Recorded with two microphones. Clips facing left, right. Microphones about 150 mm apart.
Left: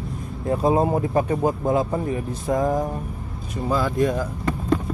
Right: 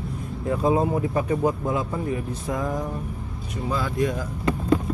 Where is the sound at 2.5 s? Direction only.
45° left (ahead or behind).